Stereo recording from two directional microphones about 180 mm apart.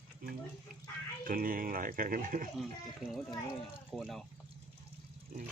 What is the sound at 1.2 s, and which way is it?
Speech, 50° right (ahead or behind).